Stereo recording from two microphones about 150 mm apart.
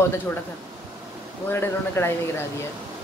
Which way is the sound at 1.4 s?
15° left (ahead or behind).